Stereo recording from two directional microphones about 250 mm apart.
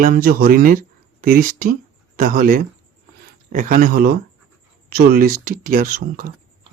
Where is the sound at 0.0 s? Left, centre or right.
Right.